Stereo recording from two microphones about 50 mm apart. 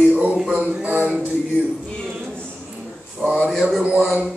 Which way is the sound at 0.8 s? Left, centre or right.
Right.